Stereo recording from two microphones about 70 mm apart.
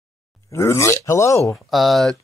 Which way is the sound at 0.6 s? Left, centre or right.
Left.